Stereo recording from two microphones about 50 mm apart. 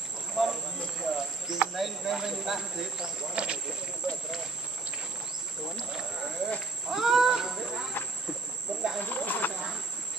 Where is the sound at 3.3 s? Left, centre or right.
Right.